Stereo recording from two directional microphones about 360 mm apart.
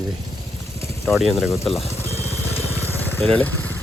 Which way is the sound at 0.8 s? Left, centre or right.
Centre.